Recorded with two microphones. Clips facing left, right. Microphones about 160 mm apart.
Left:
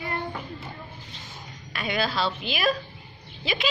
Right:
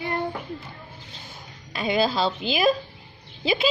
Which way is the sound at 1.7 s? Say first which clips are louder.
Right 5 dB; 25° right (ahead or behind).